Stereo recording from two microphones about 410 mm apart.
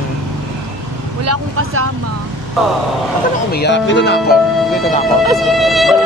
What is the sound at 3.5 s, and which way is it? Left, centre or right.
Speech, left.